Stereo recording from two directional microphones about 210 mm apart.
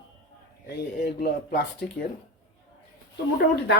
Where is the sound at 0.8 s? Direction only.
50° left (ahead or behind).